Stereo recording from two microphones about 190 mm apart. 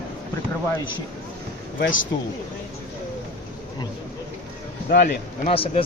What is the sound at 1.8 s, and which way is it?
Speech, 90° left.